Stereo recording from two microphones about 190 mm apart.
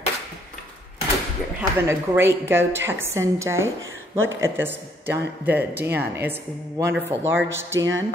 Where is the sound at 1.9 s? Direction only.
15° right (ahead or behind).